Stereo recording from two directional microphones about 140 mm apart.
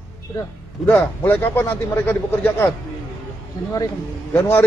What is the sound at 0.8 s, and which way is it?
Speech, 10° left (ahead or behind).